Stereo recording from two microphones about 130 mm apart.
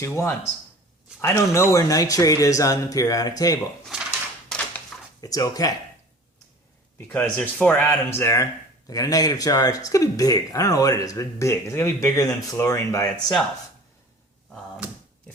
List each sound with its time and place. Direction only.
0.0 s speech: 20° left (ahead or behind)
4.4 s a sound: 5° left (ahead or behind)
5.2 s speech: 25° left (ahead or behind)
7.1 s speech: 10° left (ahead or behind)